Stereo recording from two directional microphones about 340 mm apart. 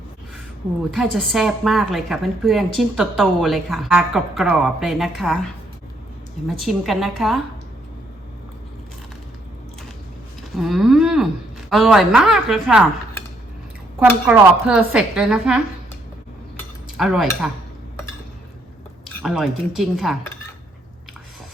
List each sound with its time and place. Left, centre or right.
0.9 s a woman's voice: centre
6.5 s a woman's voice: centre
10.6 s a woman's voice: centre
14.0 s a woman's voice: centre
17.0 s a woman's voice: centre
19.0 s speech: centre